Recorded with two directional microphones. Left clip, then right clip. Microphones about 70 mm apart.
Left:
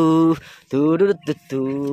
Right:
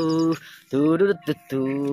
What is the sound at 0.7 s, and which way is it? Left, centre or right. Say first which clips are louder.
Speech: left 3 dB; left.